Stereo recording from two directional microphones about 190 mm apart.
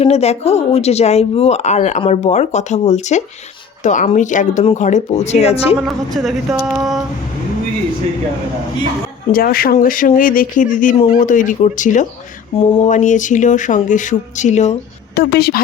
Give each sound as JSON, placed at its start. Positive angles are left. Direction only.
{"t": 0.0, "sound": "speech", "side_deg": 35}
{"t": 5.8, "sound": "speech", "side_deg": 0}
{"t": 9.3, "sound": "speech", "side_deg": 50}
{"t": 15.1, "sound": "a woman's voice", "side_deg": 55}